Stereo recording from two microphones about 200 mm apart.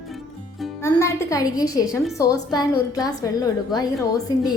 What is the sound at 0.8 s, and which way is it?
A woman's voice, 10° left (ahead or behind).